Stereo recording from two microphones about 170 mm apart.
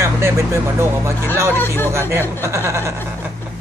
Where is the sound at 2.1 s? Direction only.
15° right (ahead or behind).